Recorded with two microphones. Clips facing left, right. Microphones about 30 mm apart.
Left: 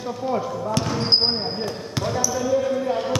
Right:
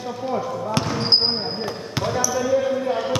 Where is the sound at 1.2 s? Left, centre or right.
Centre.